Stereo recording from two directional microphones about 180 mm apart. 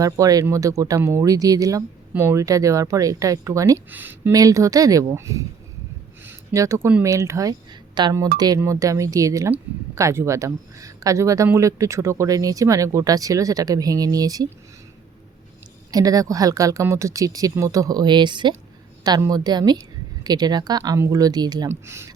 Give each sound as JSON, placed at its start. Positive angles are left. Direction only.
{"t": 0.0, "sound": "speech", "side_deg": -20}
{"t": 15.9, "sound": "speech", "side_deg": -20}